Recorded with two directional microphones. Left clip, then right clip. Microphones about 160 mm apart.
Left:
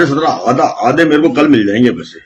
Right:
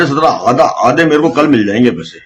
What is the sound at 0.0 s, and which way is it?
A man's voice, 45° right (ahead or behind).